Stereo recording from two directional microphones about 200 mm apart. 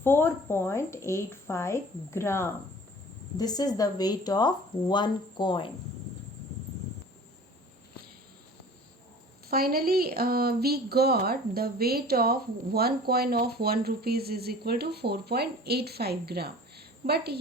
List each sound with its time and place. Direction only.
0.0 s a woman's voice: 10° left (ahead or behind)
9.5 s speech: 50° right (ahead or behind)